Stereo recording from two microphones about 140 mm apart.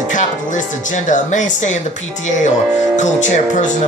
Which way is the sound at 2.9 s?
60° left (ahead or behind).